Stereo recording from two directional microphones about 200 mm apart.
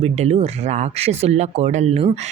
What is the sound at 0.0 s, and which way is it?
A man's voice, 30° right (ahead or behind).